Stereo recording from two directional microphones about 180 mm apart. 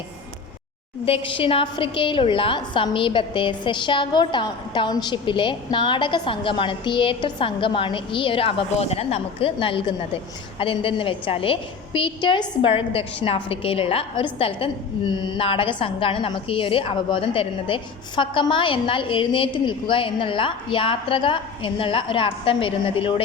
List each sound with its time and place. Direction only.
1.0 s a woman's voice: 30° left (ahead or behind)